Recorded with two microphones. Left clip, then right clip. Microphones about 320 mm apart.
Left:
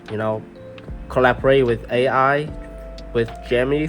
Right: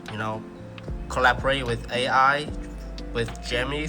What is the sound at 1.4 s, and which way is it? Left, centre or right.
Speech, left.